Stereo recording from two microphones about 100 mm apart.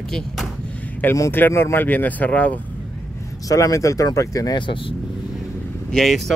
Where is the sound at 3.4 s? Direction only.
30° left (ahead or behind).